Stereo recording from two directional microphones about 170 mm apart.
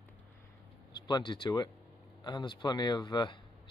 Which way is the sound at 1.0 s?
25° left (ahead or behind).